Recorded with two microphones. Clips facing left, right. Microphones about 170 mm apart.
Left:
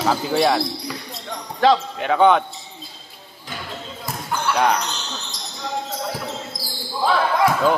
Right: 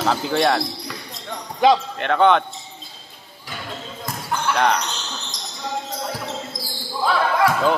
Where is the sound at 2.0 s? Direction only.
5° left (ahead or behind).